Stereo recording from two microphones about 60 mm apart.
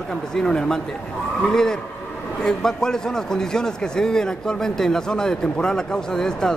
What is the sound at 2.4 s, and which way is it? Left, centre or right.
A man's voice, centre.